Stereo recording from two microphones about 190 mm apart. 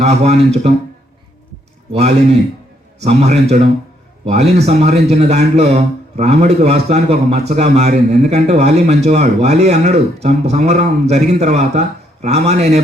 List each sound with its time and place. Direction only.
0.0 s a man's voice: 35° right (ahead or behind)
1.9 s a man's voice: 35° right (ahead or behind)